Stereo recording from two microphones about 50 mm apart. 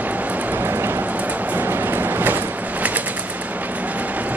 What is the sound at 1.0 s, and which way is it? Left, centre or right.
Vehicle, right.